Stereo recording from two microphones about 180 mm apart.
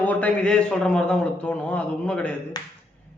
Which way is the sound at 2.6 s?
20° left (ahead or behind).